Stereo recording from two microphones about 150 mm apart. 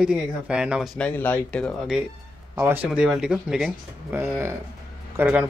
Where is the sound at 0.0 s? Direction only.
5° right (ahead or behind).